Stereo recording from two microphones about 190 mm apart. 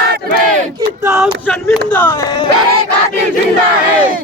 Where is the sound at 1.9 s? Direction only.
10° left (ahead or behind).